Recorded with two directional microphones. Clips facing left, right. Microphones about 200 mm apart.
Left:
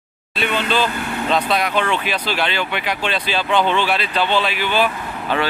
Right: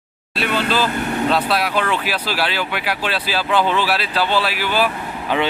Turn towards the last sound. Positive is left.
turn(degrees=-5)  # may be behind; listen again after turning